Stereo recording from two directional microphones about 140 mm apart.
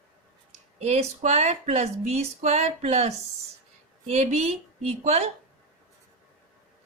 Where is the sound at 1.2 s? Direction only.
50° right (ahead or behind).